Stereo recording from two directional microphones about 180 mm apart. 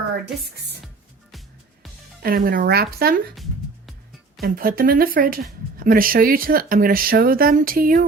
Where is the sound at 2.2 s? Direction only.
55° right (ahead or behind).